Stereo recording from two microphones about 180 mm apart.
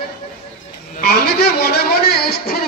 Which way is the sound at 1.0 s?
60° left (ahead or behind).